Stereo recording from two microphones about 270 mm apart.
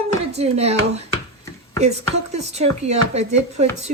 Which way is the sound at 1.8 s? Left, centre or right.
Right.